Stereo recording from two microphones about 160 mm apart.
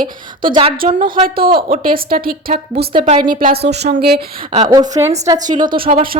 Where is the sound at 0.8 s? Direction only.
60° right (ahead or behind).